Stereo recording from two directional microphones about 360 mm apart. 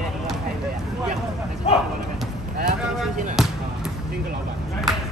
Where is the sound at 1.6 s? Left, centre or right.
Centre.